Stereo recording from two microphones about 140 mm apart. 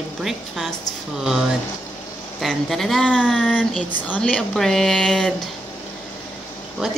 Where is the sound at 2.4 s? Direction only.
Centre (ahead or behind).